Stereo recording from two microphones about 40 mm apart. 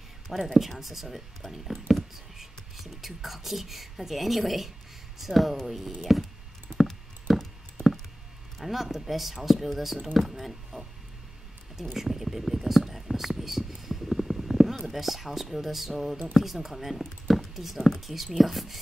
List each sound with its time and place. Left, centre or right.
0.4 s speech: centre
6.9 s a sound: centre
8.5 s speech: centre
11.9 s whispering: centre
14.9 s speech: centre